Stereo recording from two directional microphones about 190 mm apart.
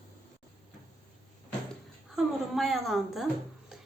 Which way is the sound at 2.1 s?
Centre (ahead or behind).